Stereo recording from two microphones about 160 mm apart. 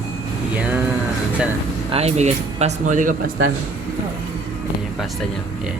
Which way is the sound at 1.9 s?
40° right (ahead or behind).